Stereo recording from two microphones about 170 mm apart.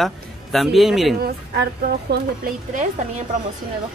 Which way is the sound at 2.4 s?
50° right (ahead or behind).